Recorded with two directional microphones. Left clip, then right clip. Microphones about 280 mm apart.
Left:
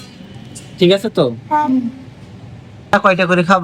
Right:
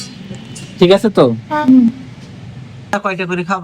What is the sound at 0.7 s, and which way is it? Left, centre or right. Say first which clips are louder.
Speech: right 3 dB; centre.